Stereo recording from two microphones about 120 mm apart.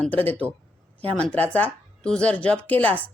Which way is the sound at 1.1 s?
10° left (ahead or behind).